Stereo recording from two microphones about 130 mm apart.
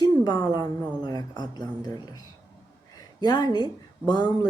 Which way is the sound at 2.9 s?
30° left (ahead or behind).